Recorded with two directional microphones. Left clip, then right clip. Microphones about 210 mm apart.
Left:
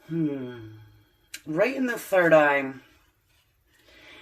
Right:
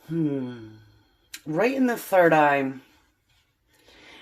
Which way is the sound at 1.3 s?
30° right (ahead or behind).